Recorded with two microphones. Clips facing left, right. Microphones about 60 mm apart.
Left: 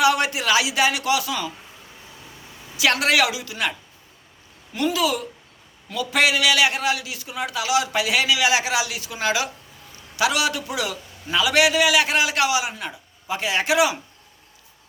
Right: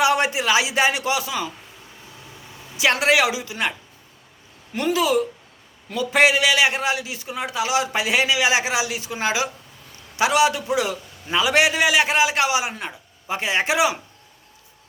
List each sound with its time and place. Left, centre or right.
0.0 s a man's voice: right
2.7 s a man's voice: right
4.7 s a man's voice: right